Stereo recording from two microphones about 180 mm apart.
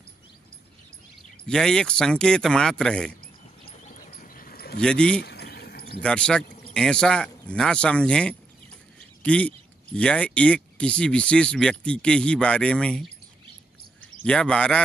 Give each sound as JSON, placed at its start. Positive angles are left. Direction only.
{"t": 1.5, "sound": "speech", "side_deg": 5}
{"t": 3.9, "sound": "a sound", "side_deg": 50}
{"t": 4.7, "sound": "speech", "side_deg": 5}
{"t": 5.2, "sound": "a sound", "side_deg": 65}
{"t": 6.0, "sound": "speech", "side_deg": 5}
{"t": 14.2, "sound": "speech", "side_deg": 5}